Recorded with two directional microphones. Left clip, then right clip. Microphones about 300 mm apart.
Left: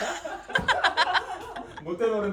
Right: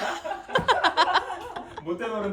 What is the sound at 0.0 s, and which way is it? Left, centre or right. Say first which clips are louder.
Chuckle: right 2 dB; centre.